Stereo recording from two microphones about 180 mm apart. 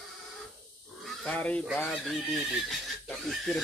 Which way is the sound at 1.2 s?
10° left (ahead or behind).